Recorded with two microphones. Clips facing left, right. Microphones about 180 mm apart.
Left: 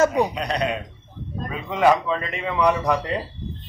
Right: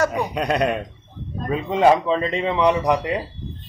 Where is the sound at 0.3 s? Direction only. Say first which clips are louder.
Right 4 dB; 50° right (ahead or behind).